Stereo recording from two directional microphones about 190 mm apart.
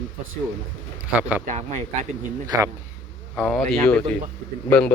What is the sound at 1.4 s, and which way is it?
Speech, 40° right (ahead or behind).